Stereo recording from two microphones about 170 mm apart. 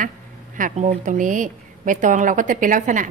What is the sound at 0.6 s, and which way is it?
Speech, 50° right (ahead or behind).